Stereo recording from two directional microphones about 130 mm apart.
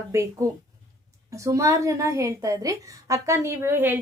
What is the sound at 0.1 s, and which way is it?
A woman's voice, 20° right (ahead or behind).